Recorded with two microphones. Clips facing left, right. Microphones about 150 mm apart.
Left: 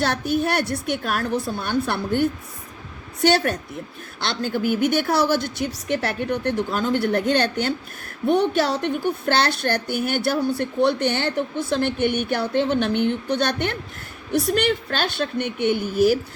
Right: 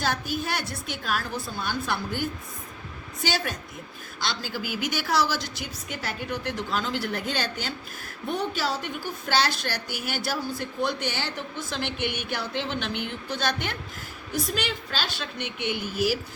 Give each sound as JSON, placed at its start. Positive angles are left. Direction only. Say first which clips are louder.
{"t": 0.0, "sound": "a woman's voice", "louder": "left 7 dB", "side_deg": 65}